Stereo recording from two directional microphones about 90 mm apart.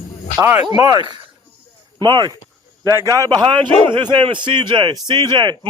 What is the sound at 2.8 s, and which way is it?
Speech, 35° right (ahead or behind).